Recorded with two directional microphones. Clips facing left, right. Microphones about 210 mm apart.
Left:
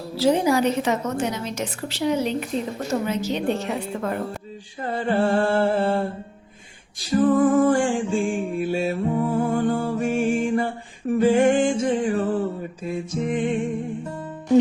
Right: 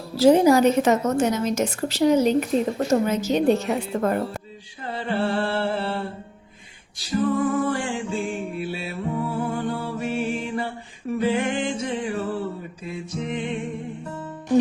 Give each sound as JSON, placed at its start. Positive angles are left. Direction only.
{"t": 0.2, "sound": "a woman's voice", "side_deg": -45}
{"t": 4.8, "sound": "music", "side_deg": 50}